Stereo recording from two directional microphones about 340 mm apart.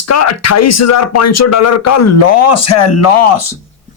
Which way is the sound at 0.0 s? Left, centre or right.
Left.